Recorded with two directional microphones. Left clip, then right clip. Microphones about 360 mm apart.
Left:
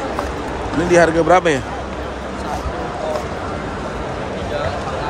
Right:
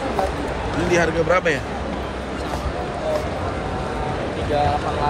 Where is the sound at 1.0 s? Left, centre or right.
Centre.